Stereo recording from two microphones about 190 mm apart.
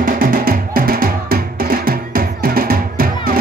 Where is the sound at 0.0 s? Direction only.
50° right (ahead or behind).